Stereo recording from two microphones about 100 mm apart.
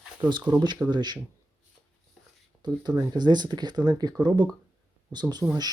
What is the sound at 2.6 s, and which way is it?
Speech, 45° right (ahead or behind).